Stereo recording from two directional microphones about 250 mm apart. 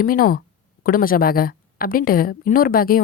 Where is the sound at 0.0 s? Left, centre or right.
Left.